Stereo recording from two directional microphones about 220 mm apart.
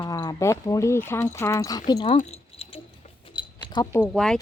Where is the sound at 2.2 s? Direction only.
30° left (ahead or behind).